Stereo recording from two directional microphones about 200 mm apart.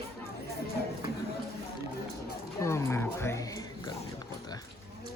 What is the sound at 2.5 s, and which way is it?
Music, 15° left (ahead or behind).